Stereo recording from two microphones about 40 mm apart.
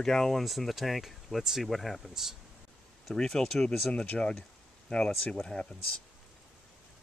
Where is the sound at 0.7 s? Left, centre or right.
Centre.